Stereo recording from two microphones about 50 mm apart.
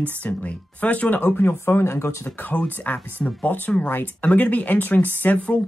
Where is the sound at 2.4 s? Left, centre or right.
Left.